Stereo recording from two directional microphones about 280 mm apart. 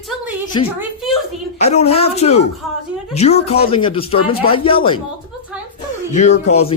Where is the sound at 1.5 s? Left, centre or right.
Left.